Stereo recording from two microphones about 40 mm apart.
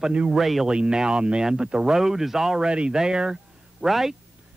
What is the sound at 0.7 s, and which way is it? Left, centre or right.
Speech, right.